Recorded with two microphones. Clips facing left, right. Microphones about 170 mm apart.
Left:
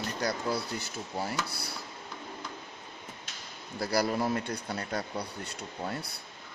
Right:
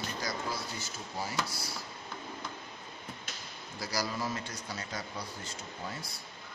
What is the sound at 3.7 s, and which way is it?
Speech, 60° left (ahead or behind).